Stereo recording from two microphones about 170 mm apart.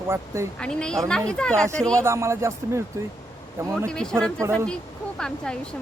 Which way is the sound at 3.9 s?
5° left (ahead or behind).